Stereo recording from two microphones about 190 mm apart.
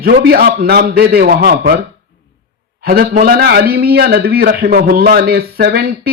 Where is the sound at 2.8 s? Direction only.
50° right (ahead or behind).